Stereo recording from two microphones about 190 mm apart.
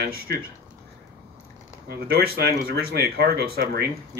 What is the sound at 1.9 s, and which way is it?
Speech, 55° right (ahead or behind).